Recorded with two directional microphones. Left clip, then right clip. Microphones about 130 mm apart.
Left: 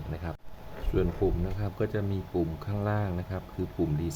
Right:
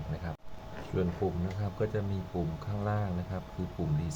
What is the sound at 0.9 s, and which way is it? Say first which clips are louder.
Speech: left 4 dB; 45° left (ahead or behind).